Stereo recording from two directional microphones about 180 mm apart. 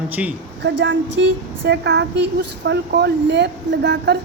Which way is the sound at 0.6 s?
85° right.